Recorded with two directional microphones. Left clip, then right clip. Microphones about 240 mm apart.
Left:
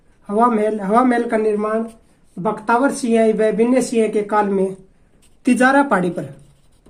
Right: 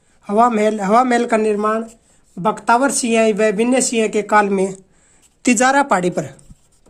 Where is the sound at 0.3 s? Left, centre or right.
Right.